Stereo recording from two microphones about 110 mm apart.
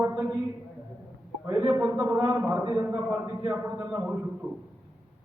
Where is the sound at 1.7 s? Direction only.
20° right (ahead or behind).